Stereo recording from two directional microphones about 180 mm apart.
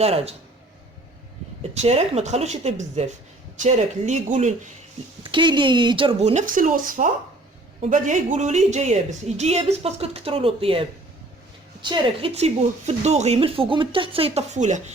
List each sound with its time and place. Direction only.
0.0 s a woman's voice: 35° right (ahead or behind)
1.7 s a woman's voice: 35° right (ahead or behind)
5.2 s a woman's voice: 25° right (ahead or behind)